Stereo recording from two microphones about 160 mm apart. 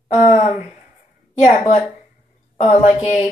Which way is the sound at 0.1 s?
45° left (ahead or behind).